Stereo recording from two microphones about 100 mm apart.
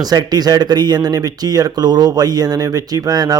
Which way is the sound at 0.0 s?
40° right (ahead or behind).